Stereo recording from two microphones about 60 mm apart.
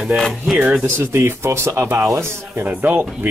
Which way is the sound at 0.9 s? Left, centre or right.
Right.